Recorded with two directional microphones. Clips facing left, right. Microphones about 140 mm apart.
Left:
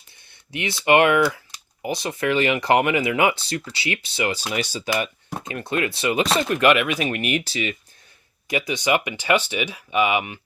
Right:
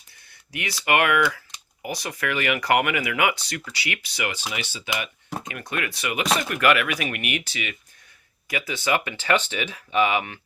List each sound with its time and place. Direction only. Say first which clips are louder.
0.5 s speech: left 5 dB; 25° left (ahead or behind)
4.5 s speech: left 7 dB; 40° left (ahead or behind)
5.4 s speech: left 6 dB; 30° left (ahead or behind)
8.4 s speech: left 3 dB; 20° left (ahead or behind)